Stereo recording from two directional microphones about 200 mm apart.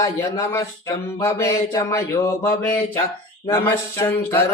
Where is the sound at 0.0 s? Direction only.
15° left (ahead or behind).